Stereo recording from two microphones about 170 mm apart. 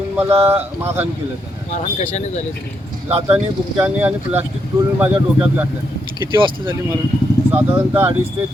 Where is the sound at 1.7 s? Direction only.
45° left (ahead or behind).